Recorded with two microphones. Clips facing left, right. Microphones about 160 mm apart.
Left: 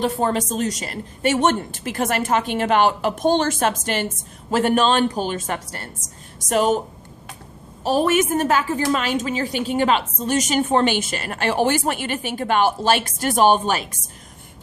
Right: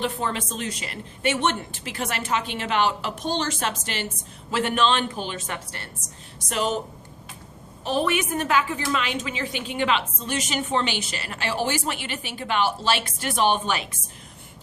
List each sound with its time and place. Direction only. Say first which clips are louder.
0.0 s a woman's voice: left 6 dB; 40° left (ahead or behind)
7.9 s a woman's voice: left 6 dB; 40° left (ahead or behind)